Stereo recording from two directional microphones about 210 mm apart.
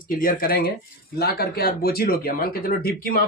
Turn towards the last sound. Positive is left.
turn(degrees=45)  # may be behind; listen again after turning